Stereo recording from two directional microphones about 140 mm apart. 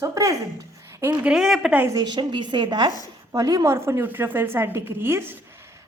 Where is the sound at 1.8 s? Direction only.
25° right (ahead or behind).